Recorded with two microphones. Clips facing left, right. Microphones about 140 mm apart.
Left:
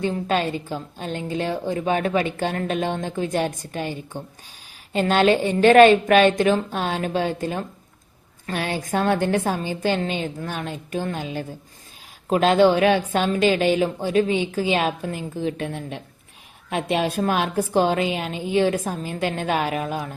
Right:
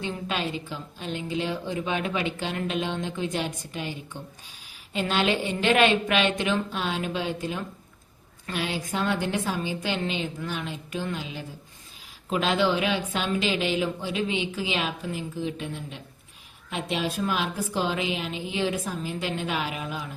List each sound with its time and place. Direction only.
0.0 s a woman's voice: 45° left (ahead or behind)